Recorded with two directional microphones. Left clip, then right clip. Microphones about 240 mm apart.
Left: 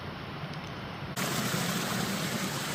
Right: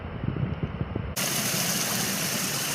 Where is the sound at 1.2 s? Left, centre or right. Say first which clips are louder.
Right 4 dB; right.